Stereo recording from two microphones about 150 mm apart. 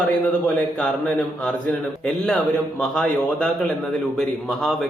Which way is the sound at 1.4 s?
5° left (ahead or behind).